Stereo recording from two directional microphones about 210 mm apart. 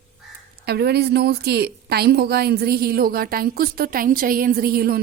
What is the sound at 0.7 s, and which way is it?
A woman's voice, 50° right (ahead or behind).